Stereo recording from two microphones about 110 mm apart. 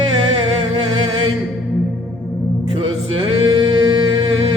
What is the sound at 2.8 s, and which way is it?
Music, 55° right (ahead or behind).